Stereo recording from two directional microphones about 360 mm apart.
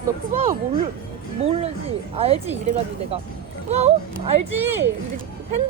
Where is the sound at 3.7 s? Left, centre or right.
Centre.